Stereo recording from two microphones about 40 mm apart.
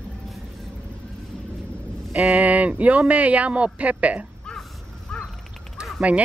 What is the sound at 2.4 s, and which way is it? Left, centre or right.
Speech, right.